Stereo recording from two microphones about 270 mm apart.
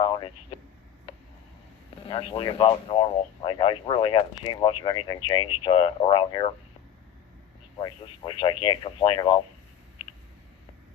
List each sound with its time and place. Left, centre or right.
0.0 s a sound: centre
2.0 s speech: centre
7.8 s speech: centre